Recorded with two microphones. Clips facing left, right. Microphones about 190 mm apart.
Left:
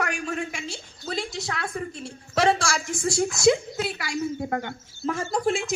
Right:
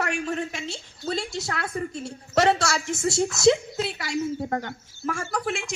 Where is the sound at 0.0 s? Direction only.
25° right (ahead or behind).